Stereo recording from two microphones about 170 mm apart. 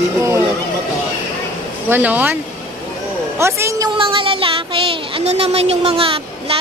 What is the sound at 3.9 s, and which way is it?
Speech, 30° right (ahead or behind).